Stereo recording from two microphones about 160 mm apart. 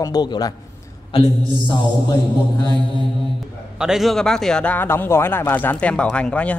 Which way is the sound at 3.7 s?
5° right (ahead or behind).